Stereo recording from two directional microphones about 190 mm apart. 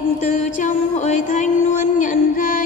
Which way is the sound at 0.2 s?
40° left (ahead or behind).